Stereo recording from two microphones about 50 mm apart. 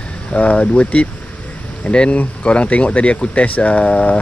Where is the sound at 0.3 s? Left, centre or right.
Left.